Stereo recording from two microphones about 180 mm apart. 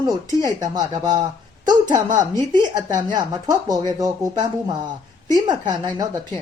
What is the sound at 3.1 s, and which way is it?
A woman's voice, 20° right (ahead or behind).